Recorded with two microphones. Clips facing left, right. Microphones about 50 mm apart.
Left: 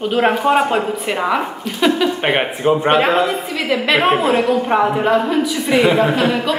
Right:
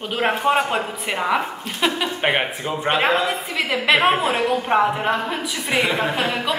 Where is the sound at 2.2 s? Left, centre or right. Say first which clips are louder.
Right 1 dB; centre.